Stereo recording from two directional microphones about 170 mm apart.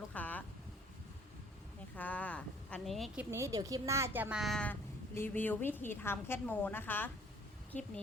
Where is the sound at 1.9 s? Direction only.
10° left (ahead or behind).